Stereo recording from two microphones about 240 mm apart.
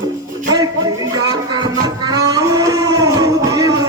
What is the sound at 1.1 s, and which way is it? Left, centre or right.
Music, centre.